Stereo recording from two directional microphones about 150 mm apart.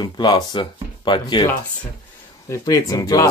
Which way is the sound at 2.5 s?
25° left (ahead or behind).